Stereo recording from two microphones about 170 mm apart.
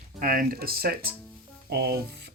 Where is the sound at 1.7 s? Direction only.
70° right (ahead or behind).